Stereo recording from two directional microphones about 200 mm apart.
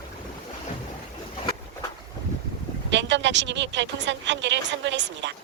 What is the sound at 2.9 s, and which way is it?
Speech, 65° right (ahead or behind).